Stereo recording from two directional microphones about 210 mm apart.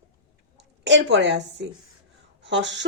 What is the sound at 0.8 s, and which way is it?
A woman's voice, 55° right (ahead or behind).